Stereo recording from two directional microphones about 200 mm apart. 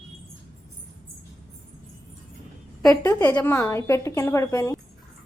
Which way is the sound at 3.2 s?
10° left (ahead or behind).